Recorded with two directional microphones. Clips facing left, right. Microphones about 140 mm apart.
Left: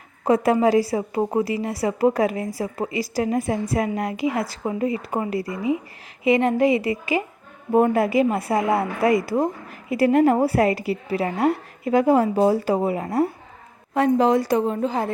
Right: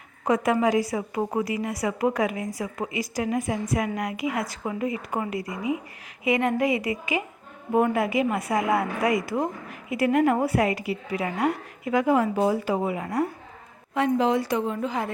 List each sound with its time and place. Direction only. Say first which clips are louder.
0.3 s a woman's voice: left 4 dB; 35° left (ahead or behind)